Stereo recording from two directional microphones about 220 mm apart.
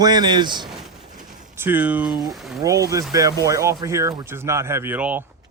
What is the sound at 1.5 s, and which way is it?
Speech, 10° right (ahead or behind).